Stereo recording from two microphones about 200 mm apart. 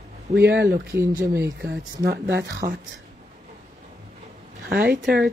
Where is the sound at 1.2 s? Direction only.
15° right (ahead or behind).